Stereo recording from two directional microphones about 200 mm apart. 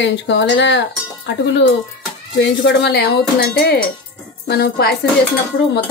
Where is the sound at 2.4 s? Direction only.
60° left (ahead or behind).